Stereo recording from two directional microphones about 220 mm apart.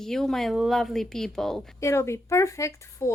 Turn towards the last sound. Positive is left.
turn(degrees=15)  # may be behind; listen again after turning